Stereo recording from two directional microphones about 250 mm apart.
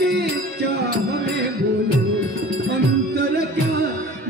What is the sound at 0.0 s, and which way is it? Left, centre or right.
Music, right.